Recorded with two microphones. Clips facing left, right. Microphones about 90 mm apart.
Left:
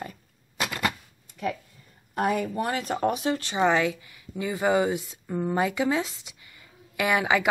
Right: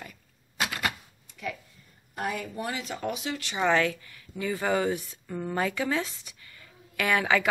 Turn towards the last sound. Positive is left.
turn(degrees=15)  # may be behind; listen again after turning